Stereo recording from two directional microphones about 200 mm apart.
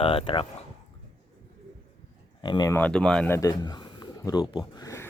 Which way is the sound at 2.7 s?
5° left (ahead or behind).